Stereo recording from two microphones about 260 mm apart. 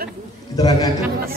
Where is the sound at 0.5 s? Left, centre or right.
Centre.